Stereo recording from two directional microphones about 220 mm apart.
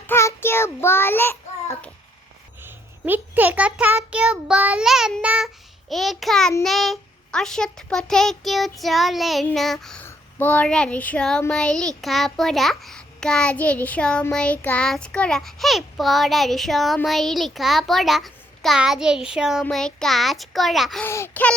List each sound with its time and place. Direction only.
0.1 s child singing: 10° left (ahead or behind)
2.6 s a child's voice: 10° right (ahead or behind); by 21.5 s 10° left (ahead or behind)